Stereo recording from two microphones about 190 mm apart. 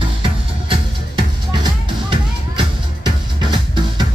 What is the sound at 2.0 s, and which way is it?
Music, 25° right (ahead or behind).